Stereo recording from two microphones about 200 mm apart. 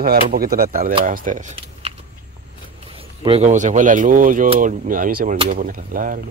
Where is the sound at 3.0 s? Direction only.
30° right (ahead or behind); by 6.2 s 45° right (ahead or behind).